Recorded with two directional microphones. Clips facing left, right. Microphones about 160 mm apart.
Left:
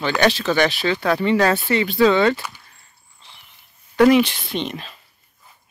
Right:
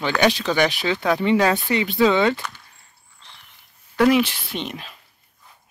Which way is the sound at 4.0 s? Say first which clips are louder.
Left 3 dB; 5° right (ahead or behind).